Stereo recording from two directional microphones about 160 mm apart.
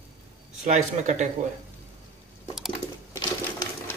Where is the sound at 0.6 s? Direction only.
45° right (ahead or behind).